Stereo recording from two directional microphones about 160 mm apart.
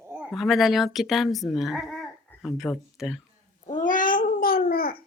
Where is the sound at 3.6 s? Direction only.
55° left (ahead or behind).